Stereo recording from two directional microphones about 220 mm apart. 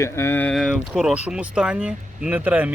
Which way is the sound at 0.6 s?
5° right (ahead or behind).